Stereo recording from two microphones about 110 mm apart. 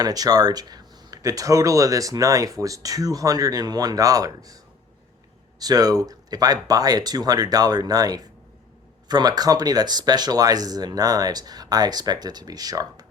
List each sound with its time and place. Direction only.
0.0 s speech: 35° right (ahead or behind)